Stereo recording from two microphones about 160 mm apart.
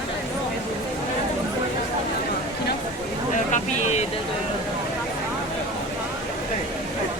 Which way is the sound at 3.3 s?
50° left (ahead or behind).